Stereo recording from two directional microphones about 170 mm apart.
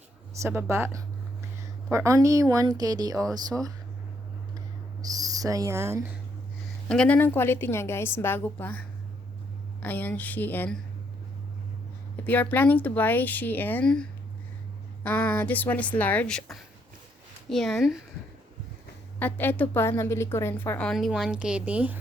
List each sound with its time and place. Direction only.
0.4 s speech: 15° right (ahead or behind)
5.0 s speech: 20° right (ahead or behind)
6.8 s a woman's voice: 5° left (ahead or behind)
9.8 s a woman's voice: 10° left (ahead or behind)
12.2 s a woman's voice: 10° left (ahead or behind)
19.2 s a woman's voice: 10° left (ahead or behind); by 21.9 s 10° right (ahead or behind)